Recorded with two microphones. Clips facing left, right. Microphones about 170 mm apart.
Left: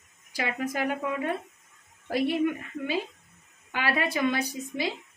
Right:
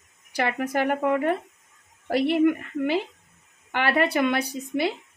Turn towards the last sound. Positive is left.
turn(degrees=-65)  # may be behind; listen again after turning